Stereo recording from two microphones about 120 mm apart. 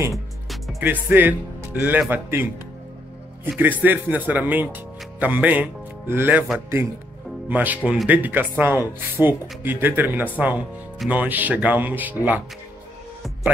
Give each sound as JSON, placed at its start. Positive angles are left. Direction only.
{"t": 0.1, "sound": "music", "side_deg": 0}
{"t": 0.7, "sound": "speech", "side_deg": -15}
{"t": 3.5, "sound": "speech", "side_deg": -15}